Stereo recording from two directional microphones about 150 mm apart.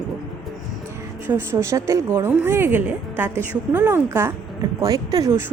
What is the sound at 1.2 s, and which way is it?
Speech, 15° right (ahead or behind).